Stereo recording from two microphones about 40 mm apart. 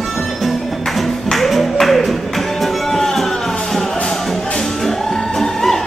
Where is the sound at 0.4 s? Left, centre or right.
Centre.